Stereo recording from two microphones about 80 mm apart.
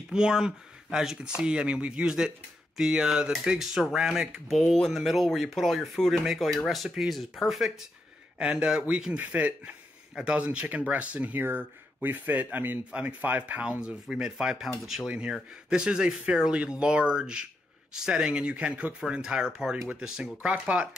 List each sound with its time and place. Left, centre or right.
0.1 s speech: centre